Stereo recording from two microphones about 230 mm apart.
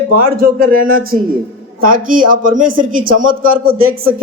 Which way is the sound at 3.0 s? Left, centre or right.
Right.